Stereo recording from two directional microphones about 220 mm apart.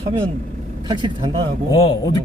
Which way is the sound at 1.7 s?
20° left (ahead or behind).